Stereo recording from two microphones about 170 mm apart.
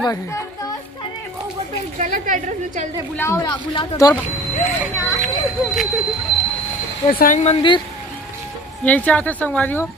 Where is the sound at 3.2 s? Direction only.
20° left (ahead or behind).